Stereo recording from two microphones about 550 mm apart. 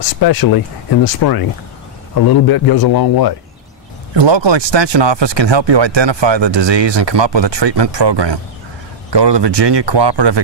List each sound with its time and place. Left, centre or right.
0.2 s a man's voice: left
4.1 s speech: right